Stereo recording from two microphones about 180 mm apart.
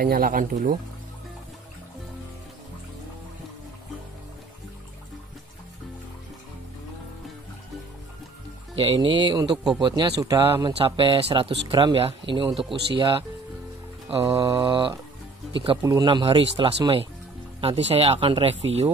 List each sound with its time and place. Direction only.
0.0 s speech: 55° right (ahead or behind)
8.7 s speech: 30° right (ahead or behind)
11.0 s speech: 30° right (ahead or behind)